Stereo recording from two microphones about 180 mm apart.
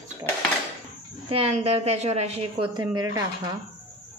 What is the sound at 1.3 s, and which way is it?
A woman's voice, 30° right (ahead or behind).